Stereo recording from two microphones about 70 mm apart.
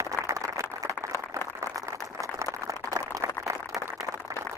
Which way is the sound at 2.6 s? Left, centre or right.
Right.